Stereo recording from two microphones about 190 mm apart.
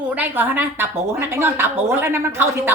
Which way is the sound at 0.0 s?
10° right (ahead or behind).